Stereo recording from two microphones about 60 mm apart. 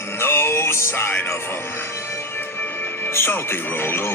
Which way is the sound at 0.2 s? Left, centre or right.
Left.